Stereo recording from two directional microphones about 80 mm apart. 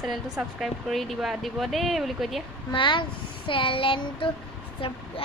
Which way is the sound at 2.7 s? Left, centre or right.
Left.